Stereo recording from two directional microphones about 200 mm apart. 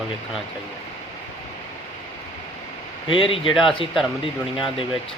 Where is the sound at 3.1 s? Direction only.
25° left (ahead or behind).